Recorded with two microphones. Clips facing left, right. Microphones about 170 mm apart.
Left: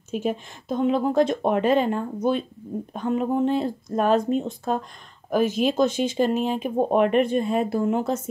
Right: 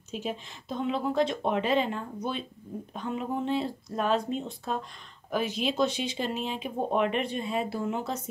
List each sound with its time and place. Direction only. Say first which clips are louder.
0.1 s speech: left 8 dB; 50° left (ahead or behind)